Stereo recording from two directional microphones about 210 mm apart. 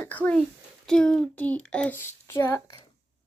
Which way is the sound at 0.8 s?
5° left (ahead or behind).